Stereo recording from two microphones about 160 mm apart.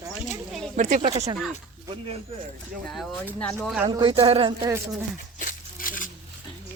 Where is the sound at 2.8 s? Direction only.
Centre (ahead or behind).